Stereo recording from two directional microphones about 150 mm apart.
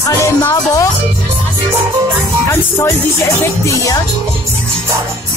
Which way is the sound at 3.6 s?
20° left (ahead or behind).